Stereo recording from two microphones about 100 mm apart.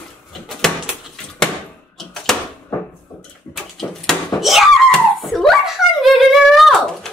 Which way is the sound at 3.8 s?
Centre (ahead or behind).